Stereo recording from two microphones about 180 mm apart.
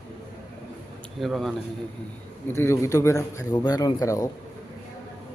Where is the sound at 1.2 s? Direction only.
Centre (ahead or behind).